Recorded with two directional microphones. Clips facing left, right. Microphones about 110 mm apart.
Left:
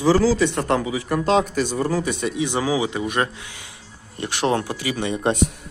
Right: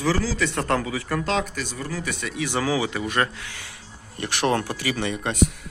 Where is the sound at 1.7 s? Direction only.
45° left (ahead or behind).